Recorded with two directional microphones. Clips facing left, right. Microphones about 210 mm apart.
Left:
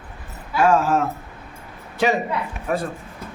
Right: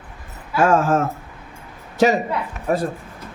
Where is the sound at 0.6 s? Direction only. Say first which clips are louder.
Right 1 dB; 50° right (ahead or behind).